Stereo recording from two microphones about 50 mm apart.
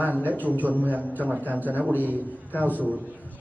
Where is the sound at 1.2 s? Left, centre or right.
Right.